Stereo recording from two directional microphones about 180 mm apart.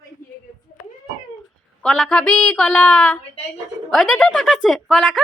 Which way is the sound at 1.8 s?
5° left (ahead or behind).